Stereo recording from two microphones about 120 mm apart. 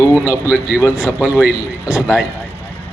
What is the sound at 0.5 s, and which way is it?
Speech, 10° right (ahead or behind).